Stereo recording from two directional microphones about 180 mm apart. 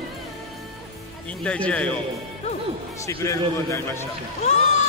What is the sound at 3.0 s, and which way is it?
A man's voice, 15° left (ahead or behind).